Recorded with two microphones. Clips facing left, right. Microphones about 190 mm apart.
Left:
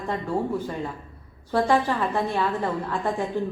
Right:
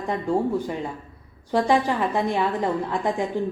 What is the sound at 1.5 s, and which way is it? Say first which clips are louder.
A woman's voice: right 1 dB; 15° right (ahead or behind).